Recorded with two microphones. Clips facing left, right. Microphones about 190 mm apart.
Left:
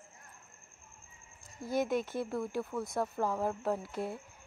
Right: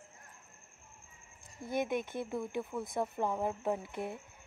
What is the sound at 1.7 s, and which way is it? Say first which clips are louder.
Speech: left 2 dB; 55° right (ahead or behind).